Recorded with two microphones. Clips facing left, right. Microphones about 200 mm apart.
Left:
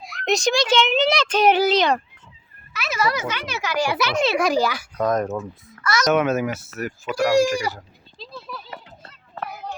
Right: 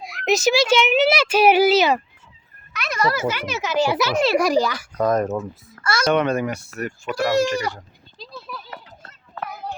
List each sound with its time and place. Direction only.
0.0 s a child's voice: centre (ahead or behind); by 4.0 s 20° right (ahead or behind)
4.1 s speech: 5° right (ahead or behind)
5.8 s speech: 30° right (ahead or behind)
6.1 s speech: 5° left (ahead or behind)
7.8 s a sound: centre (ahead or behind)